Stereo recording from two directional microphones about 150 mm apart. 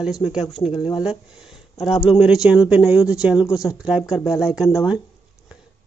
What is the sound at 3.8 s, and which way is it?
Speech, 5° right (ahead or behind).